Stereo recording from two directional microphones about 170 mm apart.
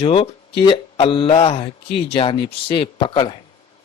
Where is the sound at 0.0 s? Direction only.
35° left (ahead or behind).